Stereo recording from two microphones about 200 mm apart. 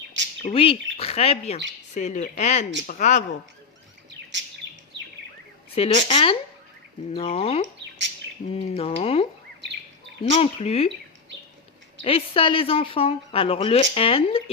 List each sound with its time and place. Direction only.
0.4 s speech: 30° left (ahead or behind)
4.6 s chirp: 65° right (ahead or behind)
5.7 s speech: 30° left (ahead or behind)
10.3 s speech: 30° left (ahead or behind)
12.0 s speech: 30° left (ahead or behind)